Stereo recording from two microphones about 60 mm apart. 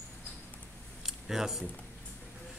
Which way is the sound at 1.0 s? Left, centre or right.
Centre.